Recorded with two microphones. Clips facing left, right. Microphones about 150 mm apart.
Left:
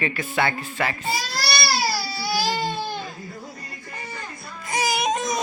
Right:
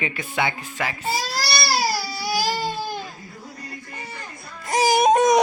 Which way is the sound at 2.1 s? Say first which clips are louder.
Even; 15° right (ahead or behind).